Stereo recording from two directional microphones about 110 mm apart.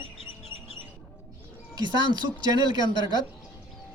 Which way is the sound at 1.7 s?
40° right (ahead or behind).